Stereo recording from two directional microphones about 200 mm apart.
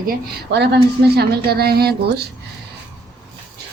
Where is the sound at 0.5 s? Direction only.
55° right (ahead or behind).